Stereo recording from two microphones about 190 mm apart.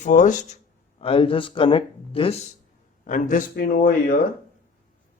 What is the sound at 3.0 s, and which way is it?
A man's voice, 45° left (ahead or behind).